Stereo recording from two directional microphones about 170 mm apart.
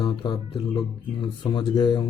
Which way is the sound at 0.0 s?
25° left (ahead or behind).